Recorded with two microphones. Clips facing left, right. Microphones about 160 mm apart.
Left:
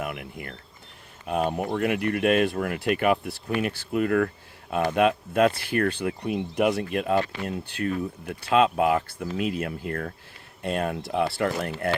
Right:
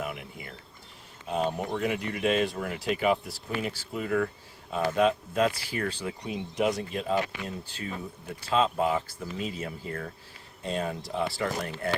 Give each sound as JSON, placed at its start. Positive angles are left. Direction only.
{"t": 0.0, "sound": "mechanisms", "side_deg": 65}
{"t": 1.3, "sound": "speech", "side_deg": 60}